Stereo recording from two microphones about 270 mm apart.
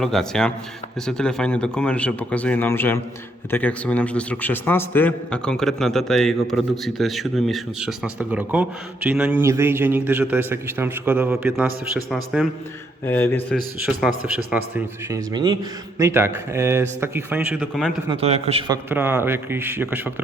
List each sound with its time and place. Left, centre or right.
0.0 s a man's voice: centre
18.1 s a man's voice: right
18.9 s a man's voice: centre